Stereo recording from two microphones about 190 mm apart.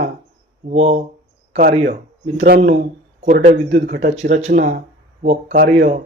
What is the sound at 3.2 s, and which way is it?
Speech, 40° right (ahead or behind).